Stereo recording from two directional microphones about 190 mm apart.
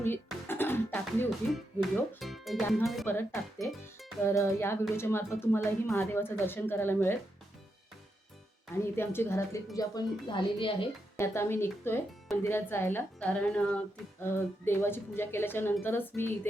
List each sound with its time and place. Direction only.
0.4 s music: 10° left (ahead or behind)
2.8 s speech: centre (ahead or behind)
3.1 s a woman's voice: 10° left (ahead or behind)
8.8 s a woman's voice: 10° left (ahead or behind)
11.2 s a woman's voice: 15° left (ahead or behind)